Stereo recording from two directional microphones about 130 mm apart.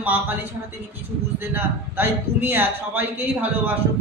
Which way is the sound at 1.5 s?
15° right (ahead or behind).